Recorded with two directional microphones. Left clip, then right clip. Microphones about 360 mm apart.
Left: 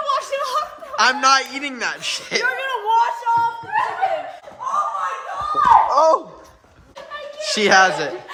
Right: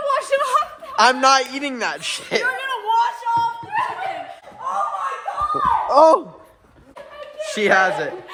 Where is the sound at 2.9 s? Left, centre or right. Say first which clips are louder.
Left 1 dB; centre.